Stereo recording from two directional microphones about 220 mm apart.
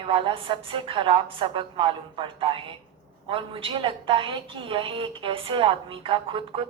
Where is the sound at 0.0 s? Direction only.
25° right (ahead or behind).